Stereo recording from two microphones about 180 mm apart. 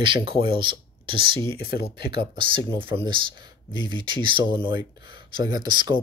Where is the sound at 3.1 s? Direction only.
25° right (ahead or behind).